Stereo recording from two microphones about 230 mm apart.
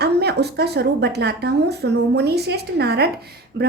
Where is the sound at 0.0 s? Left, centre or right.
Right.